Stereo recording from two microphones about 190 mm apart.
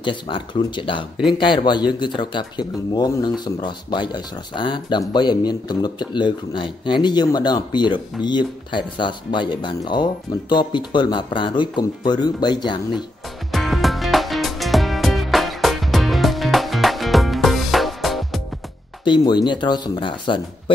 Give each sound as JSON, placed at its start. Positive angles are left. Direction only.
{"t": 0.0, "sound": "speech", "side_deg": 25}
{"t": 13.5, "sound": "music", "side_deg": 0}
{"t": 19.0, "sound": "speech", "side_deg": 25}